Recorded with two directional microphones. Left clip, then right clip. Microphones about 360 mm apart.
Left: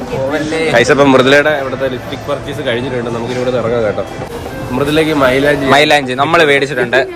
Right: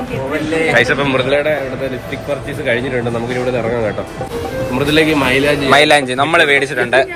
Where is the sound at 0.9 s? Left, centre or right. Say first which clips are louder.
Left 7 dB; left.